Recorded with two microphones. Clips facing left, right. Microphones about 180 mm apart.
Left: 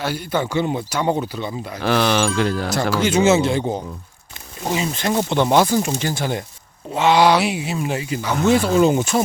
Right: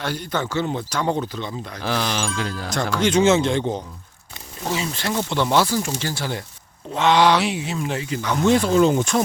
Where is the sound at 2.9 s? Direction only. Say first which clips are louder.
Left 1 dB; 5° left (ahead or behind).